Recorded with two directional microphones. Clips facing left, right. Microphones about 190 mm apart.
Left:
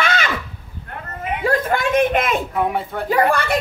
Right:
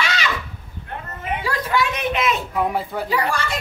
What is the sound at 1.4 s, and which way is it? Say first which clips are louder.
A man's voice: left 4 dB; 50° left (ahead or behind).